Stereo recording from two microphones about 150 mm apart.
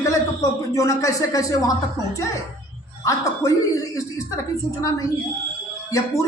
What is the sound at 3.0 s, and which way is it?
Speech, 20° left (ahead or behind).